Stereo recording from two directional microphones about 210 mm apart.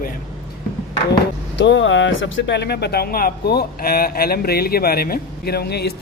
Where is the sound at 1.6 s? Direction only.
60° left (ahead or behind).